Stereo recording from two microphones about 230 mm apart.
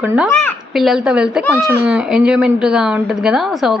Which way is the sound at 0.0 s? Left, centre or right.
Centre.